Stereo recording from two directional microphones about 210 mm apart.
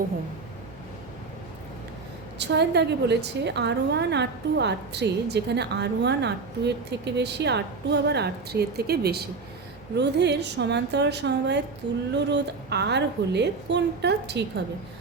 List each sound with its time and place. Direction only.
2.4 s a woman's voice: 55° right (ahead or behind)